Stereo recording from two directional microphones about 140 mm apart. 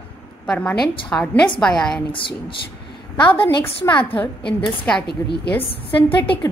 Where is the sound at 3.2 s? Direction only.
40° left (ahead or behind).